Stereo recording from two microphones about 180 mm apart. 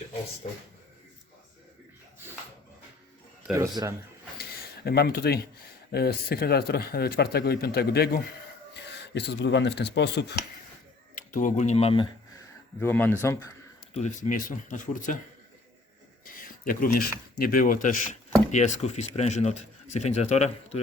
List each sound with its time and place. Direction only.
3.5 s a man's voice: 15° right (ahead or behind)
4.4 s a sound: 60° left (ahead or behind)
5.9 s speech: 60° left (ahead or behind)
11.1 s speech: 50° left (ahead or behind); by 12.1 s 30° left (ahead or behind)
12.8 s speech: 10° left (ahead or behind)
13.9 s speech: 45° left (ahead or behind)
16.2 s speech: 50° left (ahead or behind)